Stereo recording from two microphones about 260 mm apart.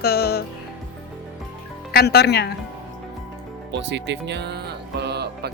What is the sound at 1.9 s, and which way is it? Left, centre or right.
Music, left.